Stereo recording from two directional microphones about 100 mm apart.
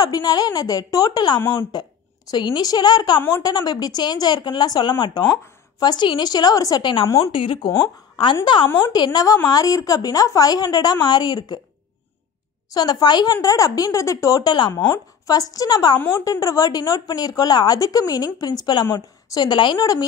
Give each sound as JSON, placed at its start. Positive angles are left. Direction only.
{"t": 0.0, "sound": "a woman's voice", "side_deg": 40}
{"t": 3.2, "sound": "speech", "side_deg": 25}
{"t": 3.4, "sound": "speech", "side_deg": 45}
{"t": 6.8, "sound": "a woman's voice", "side_deg": 55}
{"t": 8.9, "sound": "speech", "side_deg": 45}
{"t": 12.7, "sound": "speech", "side_deg": 45}